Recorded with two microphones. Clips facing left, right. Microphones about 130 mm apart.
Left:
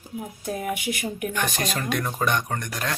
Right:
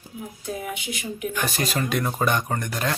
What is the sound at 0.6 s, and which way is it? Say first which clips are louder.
Speech: left 4 dB; 55° left (ahead or behind).